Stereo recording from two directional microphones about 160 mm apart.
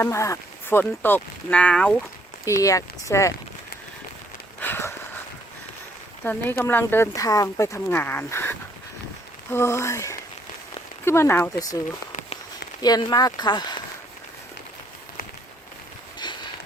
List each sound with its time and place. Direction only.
0.0 s speech: 15° left (ahead or behind)
2.4 s speech: 20° left (ahead or behind)
4.6 s a sound: 15° left (ahead or behind)
6.2 s speech: 15° left (ahead or behind)
12.8 s speech: 25° left (ahead or behind)
16.2 s a sound: 25° left (ahead or behind)